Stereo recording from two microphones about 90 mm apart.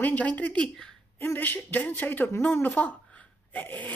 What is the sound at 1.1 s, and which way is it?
Speech, 25° left (ahead or behind).